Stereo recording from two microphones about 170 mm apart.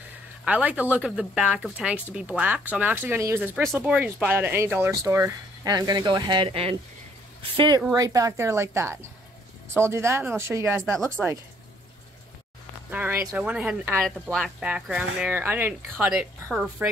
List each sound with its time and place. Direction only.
0.5 s speech: 10° right (ahead or behind)
12.9 s speech: 10° right (ahead or behind)